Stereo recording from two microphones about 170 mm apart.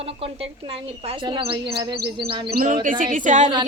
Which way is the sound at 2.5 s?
55° right (ahead or behind).